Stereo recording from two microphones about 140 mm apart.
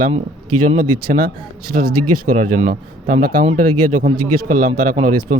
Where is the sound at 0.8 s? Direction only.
70° right (ahead or behind).